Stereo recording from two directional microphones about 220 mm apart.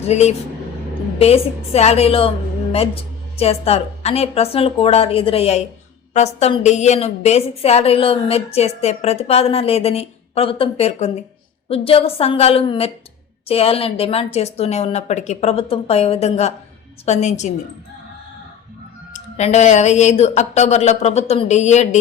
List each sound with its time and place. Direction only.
0.1 s a woman's voice: 30° left (ahead or behind)
19.1 s speech: 30° left (ahead or behind)